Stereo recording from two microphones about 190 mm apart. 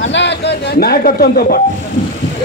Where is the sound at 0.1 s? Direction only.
65° left (ahead or behind).